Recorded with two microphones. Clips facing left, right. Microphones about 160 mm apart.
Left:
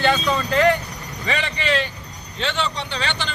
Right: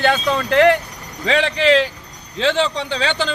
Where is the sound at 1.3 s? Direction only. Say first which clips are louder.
Right 8 dB; 90° right.